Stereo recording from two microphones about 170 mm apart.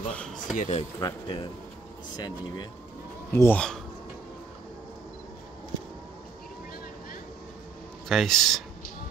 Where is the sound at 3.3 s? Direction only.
10° left (ahead or behind).